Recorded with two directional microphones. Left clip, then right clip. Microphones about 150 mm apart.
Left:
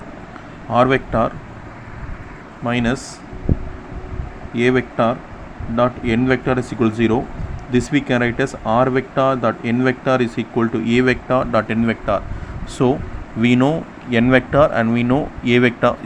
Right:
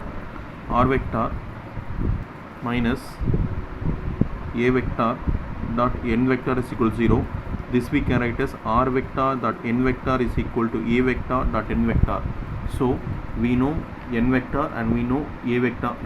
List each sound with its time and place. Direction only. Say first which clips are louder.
0.7 s speech: left 6 dB; 40° left (ahead or behind)
2.6 s speech: left 5 dB; 45° left (ahead or behind)
4.5 s speech: left 5 dB; 40° left (ahead or behind)
13.4 s speech: left 7 dB; 70° left (ahead or behind)